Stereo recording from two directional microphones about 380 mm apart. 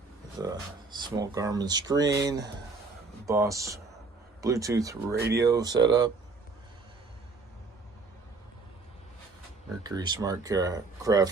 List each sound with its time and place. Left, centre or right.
0.3 s speech: centre
5.1 s speech: right
5.4 s speech: centre
9.8 s speech: centre